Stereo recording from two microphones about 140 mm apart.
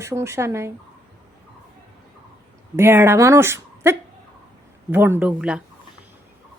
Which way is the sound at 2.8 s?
15° right (ahead or behind).